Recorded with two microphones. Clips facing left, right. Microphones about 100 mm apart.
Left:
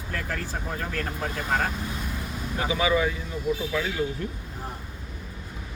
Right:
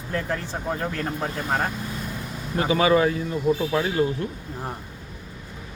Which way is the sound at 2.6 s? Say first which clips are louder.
Right 5 dB; 50° right (ahead or behind).